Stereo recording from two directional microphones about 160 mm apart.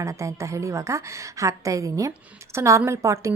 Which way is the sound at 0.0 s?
20° right (ahead or behind).